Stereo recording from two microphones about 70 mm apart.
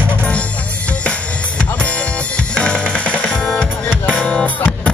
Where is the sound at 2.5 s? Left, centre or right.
Centre.